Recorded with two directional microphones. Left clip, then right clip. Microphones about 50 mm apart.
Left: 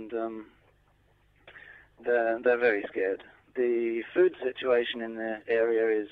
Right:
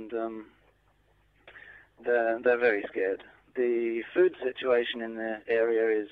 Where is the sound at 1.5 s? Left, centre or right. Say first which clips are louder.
Even; right.